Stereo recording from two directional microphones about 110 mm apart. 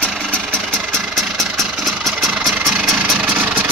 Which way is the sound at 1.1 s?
Centre (ahead or behind).